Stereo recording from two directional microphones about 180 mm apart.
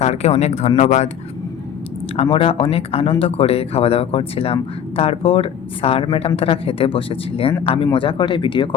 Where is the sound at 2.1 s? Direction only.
35° left (ahead or behind).